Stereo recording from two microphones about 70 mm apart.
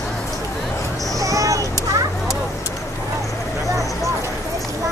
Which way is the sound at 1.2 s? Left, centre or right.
Right.